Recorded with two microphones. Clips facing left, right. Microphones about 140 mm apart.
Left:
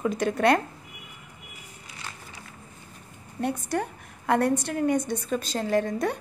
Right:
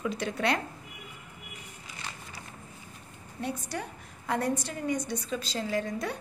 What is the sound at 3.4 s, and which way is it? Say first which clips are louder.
A woman's voice: left 7 dB; 55° left (ahead or behind).